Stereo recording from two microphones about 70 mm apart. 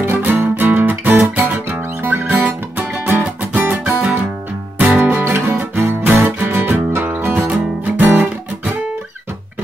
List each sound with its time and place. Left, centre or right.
0.0 s music: right